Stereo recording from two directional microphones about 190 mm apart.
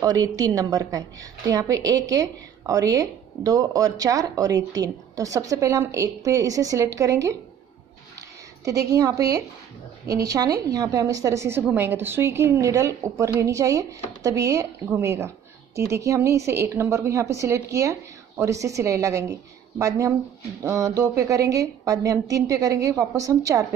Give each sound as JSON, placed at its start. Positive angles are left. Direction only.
{"t": 0.0, "sound": "a woman's voice", "side_deg": -20}
{"t": 8.6, "sound": "a woman's voice", "side_deg": -20}
{"t": 20.6, "sound": "a woman's voice", "side_deg": -15}